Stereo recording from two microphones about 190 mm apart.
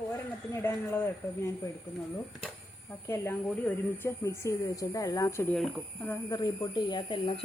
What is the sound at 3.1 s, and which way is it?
Speech, 10° left (ahead or behind).